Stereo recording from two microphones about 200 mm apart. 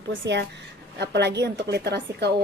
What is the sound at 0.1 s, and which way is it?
A woman's voice, 60° right (ahead or behind).